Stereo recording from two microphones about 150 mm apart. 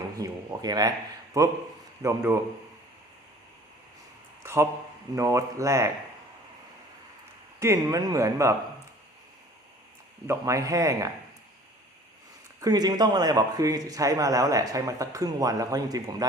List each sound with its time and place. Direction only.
0.2 s a man's voice: 25° right (ahead or behind)
4.4 s a sound: 15° right (ahead or behind)
5.1 s a man's voice: 20° right (ahead or behind)
7.6 s a man's voice: 20° right (ahead or behind)
10.2 s a man's voice: 20° right (ahead or behind)
12.5 s a man's voice: 25° right (ahead or behind)